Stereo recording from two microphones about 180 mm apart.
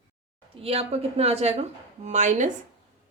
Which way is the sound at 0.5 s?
35° right (ahead or behind).